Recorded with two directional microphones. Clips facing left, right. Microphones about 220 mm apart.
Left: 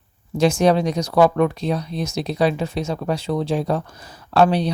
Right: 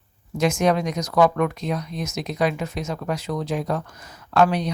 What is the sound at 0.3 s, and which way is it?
Speech, 30° left (ahead or behind).